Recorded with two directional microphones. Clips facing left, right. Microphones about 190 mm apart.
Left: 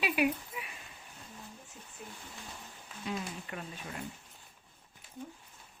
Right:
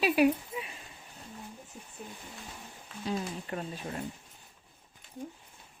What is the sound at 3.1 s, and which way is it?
Speech, 35° right (ahead or behind).